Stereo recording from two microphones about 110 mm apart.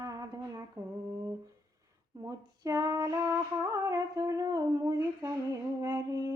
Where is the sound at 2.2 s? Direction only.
30° right (ahead or behind).